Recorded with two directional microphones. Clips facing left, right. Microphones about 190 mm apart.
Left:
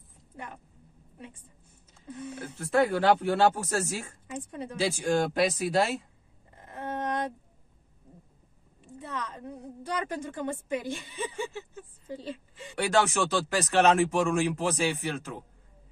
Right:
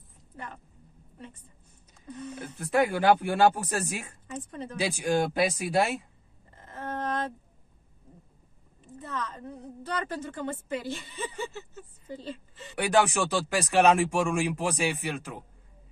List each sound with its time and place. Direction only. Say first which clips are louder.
1.1 s a sound: even; 10° left (ahead or behind)
2.3 s speech: even; 10° right (ahead or behind)
4.3 s a woman's voice: even; 10° left (ahead or behind)
4.7 s speech: even; 15° right (ahead or behind)
6.5 s a sound: left 1 dB; 15° left (ahead or behind)
8.8 s a woman's voice: right 1 dB; 15° left (ahead or behind)
12.7 s speech: right 1 dB; 15° right (ahead or behind)